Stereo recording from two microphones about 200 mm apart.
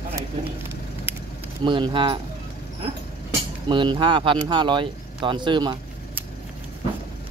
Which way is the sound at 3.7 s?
20° right (ahead or behind).